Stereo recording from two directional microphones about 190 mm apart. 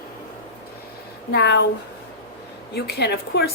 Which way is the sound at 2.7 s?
60° left (ahead or behind).